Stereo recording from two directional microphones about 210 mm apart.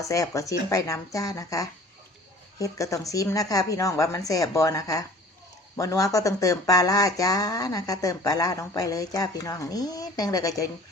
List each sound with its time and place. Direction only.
0.0 s speech: 15° left (ahead or behind)